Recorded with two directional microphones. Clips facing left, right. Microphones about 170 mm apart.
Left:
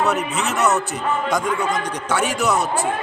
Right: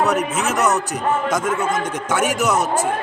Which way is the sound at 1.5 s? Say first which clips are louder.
Right 1 dB; 45° right (ahead or behind).